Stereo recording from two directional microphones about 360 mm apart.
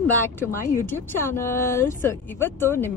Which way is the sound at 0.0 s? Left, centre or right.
Centre.